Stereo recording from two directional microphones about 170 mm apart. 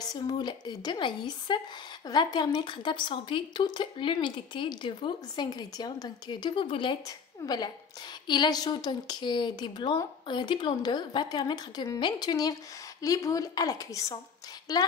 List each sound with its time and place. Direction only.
0.0 s speech: 25° left (ahead or behind)